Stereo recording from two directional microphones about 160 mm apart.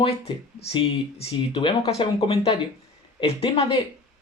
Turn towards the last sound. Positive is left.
turn(degrees=35)  # may be behind; listen again after turning